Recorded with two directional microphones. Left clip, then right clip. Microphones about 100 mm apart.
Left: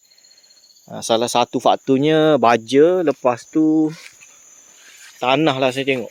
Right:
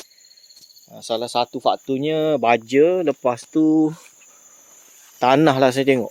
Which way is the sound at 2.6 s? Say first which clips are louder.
Left 2 dB; 40° left (ahead or behind).